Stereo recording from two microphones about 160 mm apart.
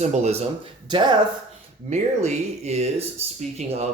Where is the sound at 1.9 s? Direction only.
45° right (ahead or behind).